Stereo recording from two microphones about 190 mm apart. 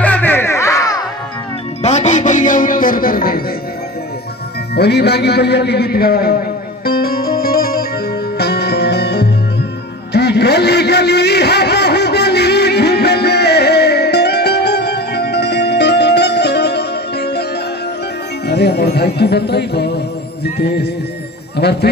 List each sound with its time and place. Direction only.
0.0 s music: 10° left (ahead or behind)
1.8 s music: 35° left (ahead or behind)
4.7 s a sound: 60° left (ahead or behind)
8.4 s music: 60° left (ahead or behind)
10.1 s a sound: 60° left (ahead or behind)
18.5 s music: 60° left (ahead or behind)